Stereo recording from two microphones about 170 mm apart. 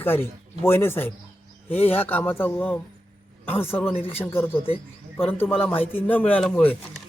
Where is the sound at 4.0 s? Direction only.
35° left (ahead or behind).